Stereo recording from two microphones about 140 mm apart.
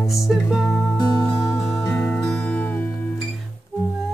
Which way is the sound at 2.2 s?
5° left (ahead or behind).